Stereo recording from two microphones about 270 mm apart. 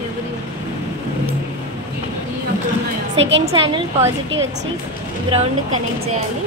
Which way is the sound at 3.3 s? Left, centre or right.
Centre.